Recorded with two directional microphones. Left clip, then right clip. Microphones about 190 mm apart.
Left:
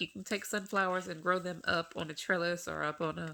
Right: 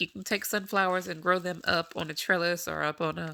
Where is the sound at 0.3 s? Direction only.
40° right (ahead or behind).